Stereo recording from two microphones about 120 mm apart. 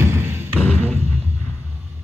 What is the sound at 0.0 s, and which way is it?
Music, 20° right (ahead or behind).